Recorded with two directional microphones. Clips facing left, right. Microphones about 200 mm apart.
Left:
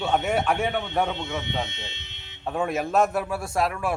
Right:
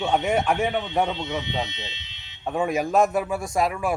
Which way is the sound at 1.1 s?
50° left (ahead or behind).